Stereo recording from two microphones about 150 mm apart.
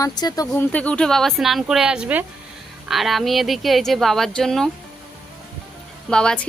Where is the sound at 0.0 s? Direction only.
25° left (ahead or behind).